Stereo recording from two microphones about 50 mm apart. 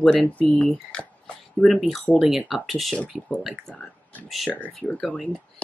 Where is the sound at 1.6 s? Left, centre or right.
Centre.